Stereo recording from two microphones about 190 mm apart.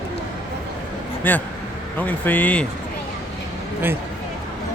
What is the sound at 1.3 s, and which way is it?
Speech, 10° left (ahead or behind).